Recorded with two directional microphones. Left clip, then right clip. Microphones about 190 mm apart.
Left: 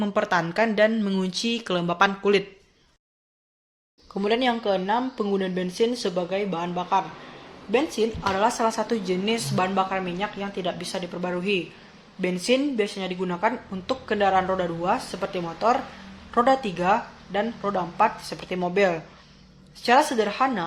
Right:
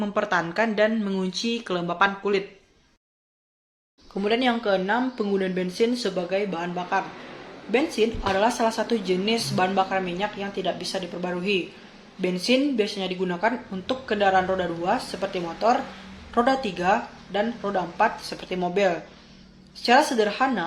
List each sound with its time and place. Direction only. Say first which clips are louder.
0.0 s a woman's voice: left 1 dB; 40° left (ahead or behind)
4.1 s a woman's voice: even; 40° left (ahead or behind)